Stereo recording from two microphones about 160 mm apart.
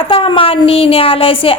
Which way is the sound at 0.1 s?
35° left (ahead or behind).